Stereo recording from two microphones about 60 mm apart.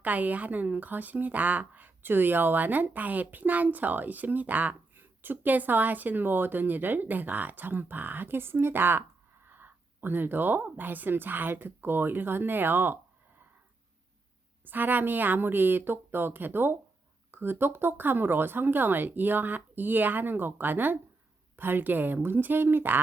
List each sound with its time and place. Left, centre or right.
0.0 s speech: right
14.6 s speech: right